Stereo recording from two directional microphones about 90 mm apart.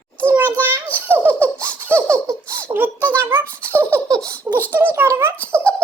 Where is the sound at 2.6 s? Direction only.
20° right (ahead or behind).